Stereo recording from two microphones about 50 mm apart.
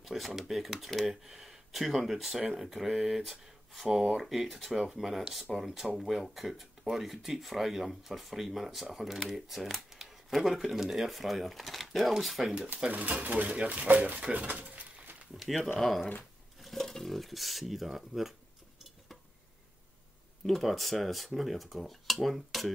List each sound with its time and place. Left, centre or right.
0.0 s speech: centre
12.9 s speech: right
15.3 s speech: centre
20.4 s speech: centre